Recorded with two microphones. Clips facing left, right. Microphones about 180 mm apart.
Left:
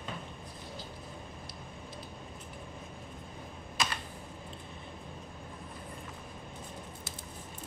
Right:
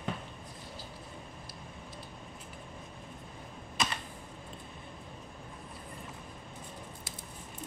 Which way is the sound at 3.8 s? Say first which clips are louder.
Right 1 dB; centre (ahead or behind).